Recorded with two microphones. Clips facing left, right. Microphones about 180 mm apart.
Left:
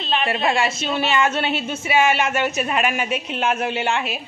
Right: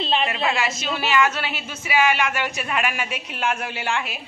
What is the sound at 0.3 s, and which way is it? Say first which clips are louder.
A woman's voice: left 3 dB; 30° left (ahead or behind).